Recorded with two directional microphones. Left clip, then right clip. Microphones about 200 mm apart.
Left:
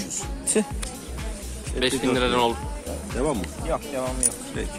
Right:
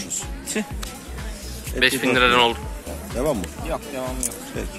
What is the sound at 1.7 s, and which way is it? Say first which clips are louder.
Speech: right 5 dB; 5° left (ahead or behind).